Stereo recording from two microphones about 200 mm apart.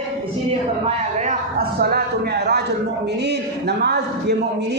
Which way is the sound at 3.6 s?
55° right (ahead or behind).